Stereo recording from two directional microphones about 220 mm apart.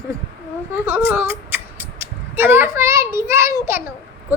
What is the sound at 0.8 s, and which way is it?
Speech, 10° right (ahead or behind).